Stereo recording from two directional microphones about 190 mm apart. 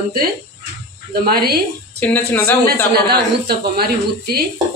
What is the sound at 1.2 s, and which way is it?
Speech, 55° right (ahead or behind).